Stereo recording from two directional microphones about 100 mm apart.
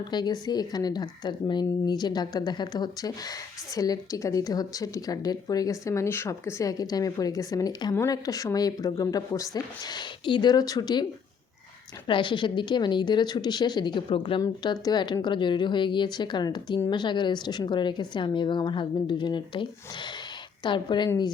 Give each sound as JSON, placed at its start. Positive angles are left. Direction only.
{"t": 0.1, "sound": "speech", "side_deg": 45}
{"t": 10.2, "sound": "speech", "side_deg": 50}
{"t": 12.0, "sound": "speech", "side_deg": 55}
{"t": 14.6, "sound": "speech", "side_deg": 45}
{"t": 20.7, "sound": "speech", "side_deg": 50}